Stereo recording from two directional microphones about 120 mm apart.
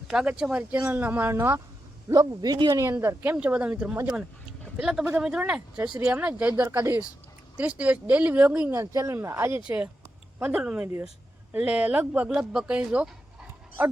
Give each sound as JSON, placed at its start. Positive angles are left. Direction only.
{"t": 0.1, "sound": "speech", "side_deg": -5}
{"t": 2.1, "sound": "a man's voice", "side_deg": -35}
{"t": 2.8, "sound": "speech", "side_deg": -25}
{"t": 8.7, "sound": "speech", "side_deg": -25}
{"t": 9.6, "sound": "speech", "side_deg": -10}